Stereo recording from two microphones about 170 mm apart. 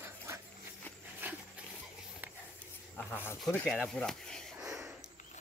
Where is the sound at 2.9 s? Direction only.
10° left (ahead or behind).